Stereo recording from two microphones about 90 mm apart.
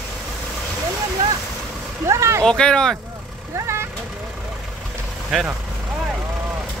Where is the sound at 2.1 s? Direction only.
35° right (ahead or behind).